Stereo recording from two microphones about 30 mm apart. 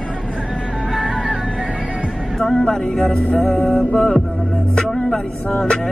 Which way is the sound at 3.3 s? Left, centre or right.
Centre.